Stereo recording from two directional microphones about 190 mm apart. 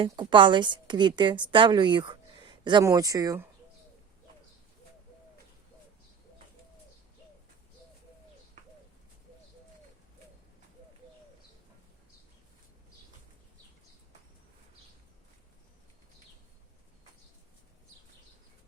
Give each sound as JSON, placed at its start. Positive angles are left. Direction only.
{"t": 0.0, "sound": "a woman's voice", "side_deg": -25}